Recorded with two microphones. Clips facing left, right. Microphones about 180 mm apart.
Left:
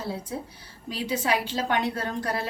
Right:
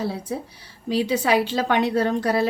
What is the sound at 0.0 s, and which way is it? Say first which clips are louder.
A woman's voice: right 5 dB; 70° right (ahead or behind).